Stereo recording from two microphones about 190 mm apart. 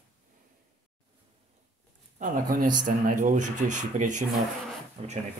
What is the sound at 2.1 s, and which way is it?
Speech, 45° right (ahead or behind).